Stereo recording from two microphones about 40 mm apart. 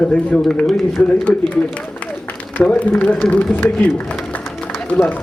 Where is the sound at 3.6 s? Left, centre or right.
Left.